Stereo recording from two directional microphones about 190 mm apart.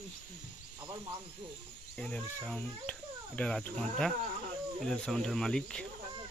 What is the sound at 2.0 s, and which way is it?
Speech, 5° left (ahead or behind).